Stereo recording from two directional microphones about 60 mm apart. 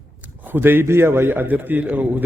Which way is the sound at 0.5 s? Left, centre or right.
Right.